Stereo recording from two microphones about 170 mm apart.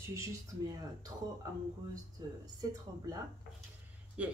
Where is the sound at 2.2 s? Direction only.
25° right (ahead or behind).